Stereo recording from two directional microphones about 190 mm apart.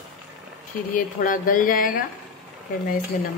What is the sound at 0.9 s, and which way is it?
Speech, 45° left (ahead or behind).